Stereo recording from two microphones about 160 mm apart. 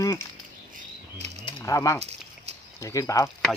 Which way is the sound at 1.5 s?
25° left (ahead or behind).